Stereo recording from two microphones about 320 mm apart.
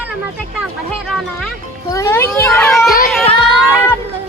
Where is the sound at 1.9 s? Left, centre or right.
Centre.